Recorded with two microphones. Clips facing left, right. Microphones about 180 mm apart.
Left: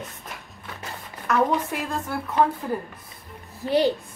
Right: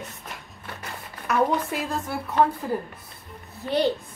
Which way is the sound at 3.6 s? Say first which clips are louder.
Left 4 dB; 20° right (ahead or behind).